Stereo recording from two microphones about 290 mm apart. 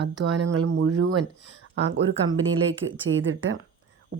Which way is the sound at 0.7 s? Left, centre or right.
Right.